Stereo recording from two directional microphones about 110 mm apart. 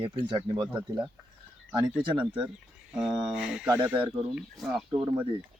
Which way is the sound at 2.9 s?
5° right (ahead or behind).